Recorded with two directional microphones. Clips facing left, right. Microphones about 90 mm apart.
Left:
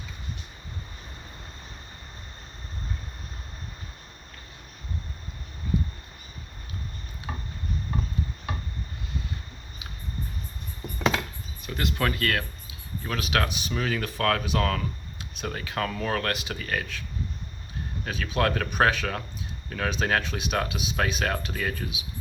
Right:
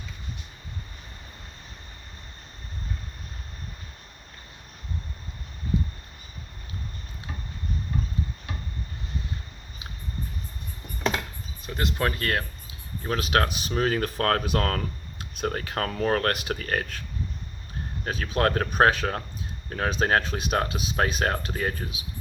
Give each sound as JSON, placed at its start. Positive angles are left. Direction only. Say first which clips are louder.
{"t": 11.6, "sound": "speech", "louder": "right 1 dB", "side_deg": -30}
{"t": 18.0, "sound": "speech", "louder": "right 2 dB", "side_deg": -40}